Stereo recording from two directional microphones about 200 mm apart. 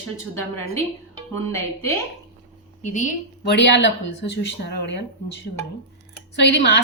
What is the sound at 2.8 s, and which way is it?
Speech, 35° left (ahead or behind).